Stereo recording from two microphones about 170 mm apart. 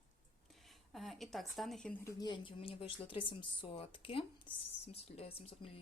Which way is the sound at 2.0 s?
25° left (ahead or behind).